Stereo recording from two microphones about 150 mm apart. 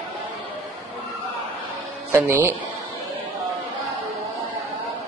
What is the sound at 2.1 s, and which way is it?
Speech, 15° right (ahead or behind).